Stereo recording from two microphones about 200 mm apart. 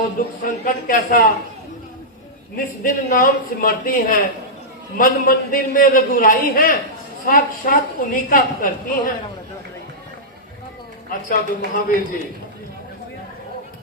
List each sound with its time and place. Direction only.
0.4 s a woman's voice: 45° left (ahead or behind)
2.8 s a woman's voice: 45° left (ahead or behind)
11.3 s a woman's voice: 45° left (ahead or behind)